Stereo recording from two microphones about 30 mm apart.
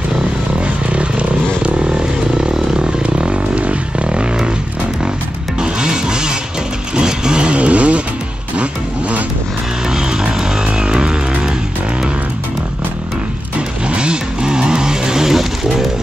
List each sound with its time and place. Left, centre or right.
2.3 s a sound: right
3.0 s a sound: right
4.1 s vehicle: right
5.6 s music: right
7.0 s vehicle: right
10.8 s music: right
13.8 s vehicle: right